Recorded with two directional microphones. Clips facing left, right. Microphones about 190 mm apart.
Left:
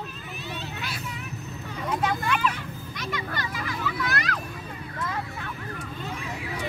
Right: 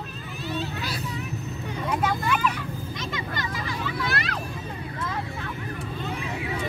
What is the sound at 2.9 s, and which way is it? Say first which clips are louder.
Music: left 2 dB; 25° right (ahead or behind).